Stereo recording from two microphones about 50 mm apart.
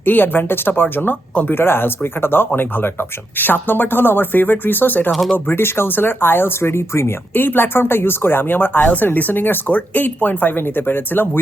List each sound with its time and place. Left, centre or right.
0.0 s speech: left
1.5 s speech: left
5.1 s speech: centre
5.5 s speech: left
7.3 s speech: left